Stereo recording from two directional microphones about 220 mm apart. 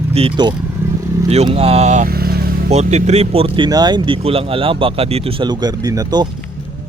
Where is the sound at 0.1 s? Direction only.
25° right (ahead or behind); by 2.6 s 45° right (ahead or behind).